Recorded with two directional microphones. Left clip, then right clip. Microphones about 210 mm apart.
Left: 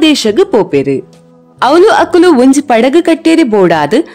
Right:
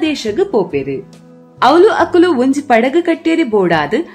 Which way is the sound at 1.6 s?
45° left (ahead or behind).